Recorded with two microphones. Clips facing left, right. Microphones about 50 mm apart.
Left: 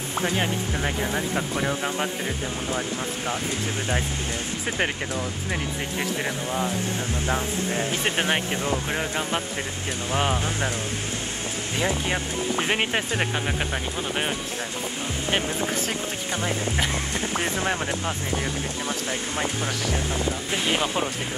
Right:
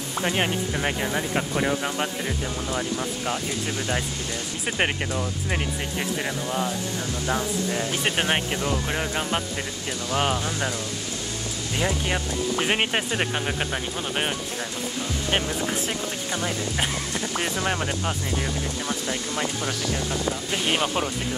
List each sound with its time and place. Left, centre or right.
1.1 s speech: centre
1.7 s speech: centre
2.7 s speech: left
6.2 s speech: centre
7.2 s speech: left
10.1 s speech: left
11.8 s speech: left
12.6 s speech: centre
15.4 s speech: centre
16.4 s speech: left
19.0 s speech: left
20.7 s speech: centre